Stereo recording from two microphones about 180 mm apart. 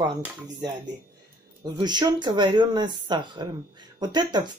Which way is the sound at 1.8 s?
25° right (ahead or behind).